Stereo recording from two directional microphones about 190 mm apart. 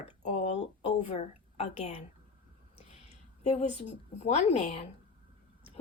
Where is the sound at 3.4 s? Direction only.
35° left (ahead or behind).